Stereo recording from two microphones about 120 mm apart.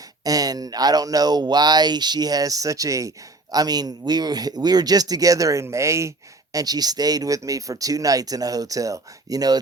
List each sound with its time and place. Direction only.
0.3 s speech: 30° right (ahead or behind)